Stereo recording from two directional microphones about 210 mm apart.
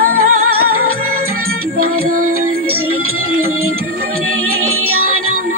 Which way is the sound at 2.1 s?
40° right (ahead or behind).